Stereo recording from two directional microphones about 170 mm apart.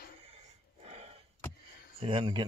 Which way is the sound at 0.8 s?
35° right (ahead or behind).